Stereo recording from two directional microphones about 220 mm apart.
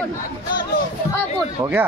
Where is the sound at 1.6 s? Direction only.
20° right (ahead or behind).